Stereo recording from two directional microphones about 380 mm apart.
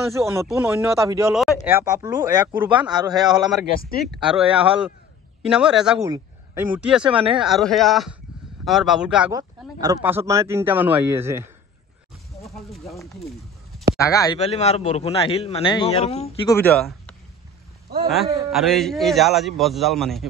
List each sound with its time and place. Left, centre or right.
0.2 s a man's voice: centre
7.4 s a man's voice: centre
12.5 s a man's voice: centre
16.5 s speech: centre
18.5 s speech: centre